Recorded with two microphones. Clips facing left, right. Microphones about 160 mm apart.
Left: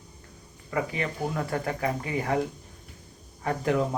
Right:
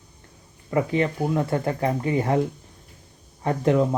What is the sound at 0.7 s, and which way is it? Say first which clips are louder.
Speech: right 7 dB; 30° right (ahead or behind).